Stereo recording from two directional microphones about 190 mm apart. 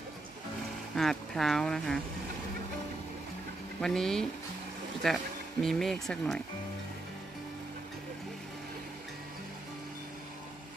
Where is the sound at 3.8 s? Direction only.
5° left (ahead or behind).